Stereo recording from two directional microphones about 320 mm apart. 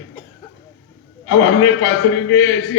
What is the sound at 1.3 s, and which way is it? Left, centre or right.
Speech, left.